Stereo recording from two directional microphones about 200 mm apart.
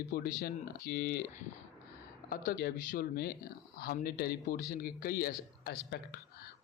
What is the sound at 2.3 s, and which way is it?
Speech, 45° left (ahead or behind).